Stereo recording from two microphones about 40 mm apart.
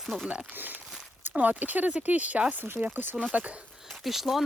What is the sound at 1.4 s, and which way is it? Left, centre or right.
Speech, right.